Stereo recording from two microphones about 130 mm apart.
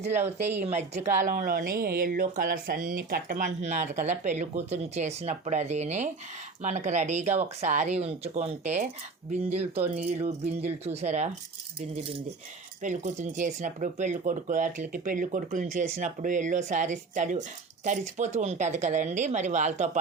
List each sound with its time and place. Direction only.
0.6 s a woman's voice: 55° right (ahead or behind)
12.8 s a woman's voice: 70° right (ahead or behind); by 15.4 s 90° right
15.4 s a woman's voice: 70° right (ahead or behind)